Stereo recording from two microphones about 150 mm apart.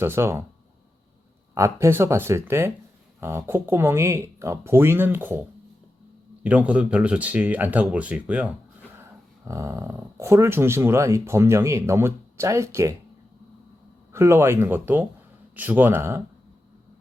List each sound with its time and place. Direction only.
0.0 s speech: 15° right (ahead or behind)
1.5 s speech: 20° right (ahead or behind)
9.4 s speech: 20° right (ahead or behind)
14.1 s speech: 20° right (ahead or behind)